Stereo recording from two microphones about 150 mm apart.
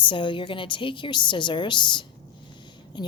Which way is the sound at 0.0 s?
35° left (ahead or behind).